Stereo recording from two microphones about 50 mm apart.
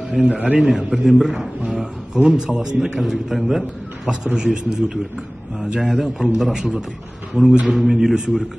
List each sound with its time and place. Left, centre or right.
0.2 s speech: right
0.6 s a man's voice: centre
1.6 s speech: right
2.3 s a man's voice: centre